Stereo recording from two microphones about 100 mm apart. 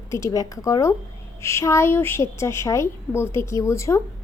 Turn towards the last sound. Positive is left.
turn(degrees=30)  # may be behind; listen again after turning